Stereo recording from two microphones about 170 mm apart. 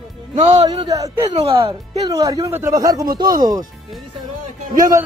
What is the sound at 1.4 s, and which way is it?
Speech, 35° right (ahead or behind).